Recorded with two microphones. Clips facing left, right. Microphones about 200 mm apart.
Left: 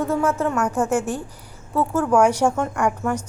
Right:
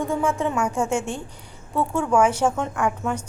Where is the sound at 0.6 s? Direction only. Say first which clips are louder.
Left 2 dB; 10° right (ahead or behind).